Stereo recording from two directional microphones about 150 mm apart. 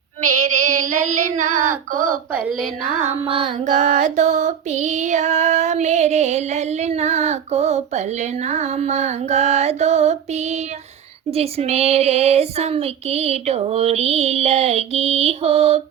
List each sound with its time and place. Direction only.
0.2 s child singing: 55° right (ahead or behind)
2.3 s speech: 10° right (ahead or behind)
3.1 s a sound: 40° right (ahead or behind)
3.7 s female singing: 60° right (ahead or behind)